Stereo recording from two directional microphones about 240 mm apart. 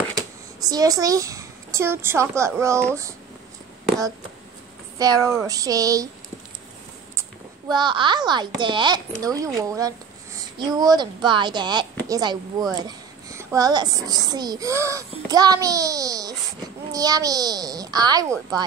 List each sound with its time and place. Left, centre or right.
0.6 s a child's voice: centre
4.9 s a child's voice: centre
7.2 s a child's voice: centre